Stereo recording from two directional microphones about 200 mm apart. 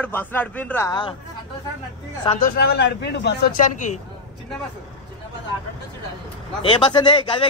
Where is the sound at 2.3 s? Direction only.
45° left (ahead or behind).